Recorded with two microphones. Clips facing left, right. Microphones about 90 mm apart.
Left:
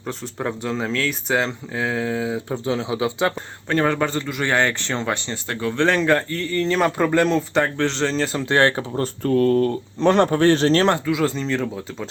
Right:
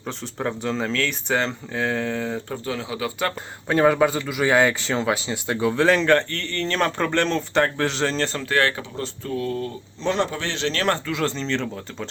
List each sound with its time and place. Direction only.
0.0 s a man's voice: centre (ahead or behind)
2.5 s speech: 20° left (ahead or behind)
3.7 s a man's voice: 10° right (ahead or behind)
8.4 s speech: 25° left (ahead or behind)
9.0 s speech: 55° left (ahead or behind); by 10.8 s 40° left (ahead or behind)
10.8 s a man's voice: 10° left (ahead or behind)